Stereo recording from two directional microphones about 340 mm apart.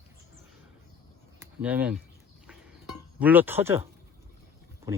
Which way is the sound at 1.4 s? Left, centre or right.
Centre.